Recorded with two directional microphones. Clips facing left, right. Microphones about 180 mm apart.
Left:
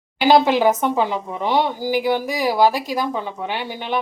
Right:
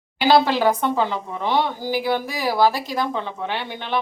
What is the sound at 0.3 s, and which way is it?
A woman's voice, 15° left (ahead or behind).